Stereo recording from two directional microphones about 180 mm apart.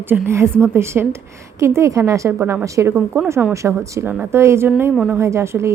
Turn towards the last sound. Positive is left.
turn(degrees=-15)  # may be behind; listen again after turning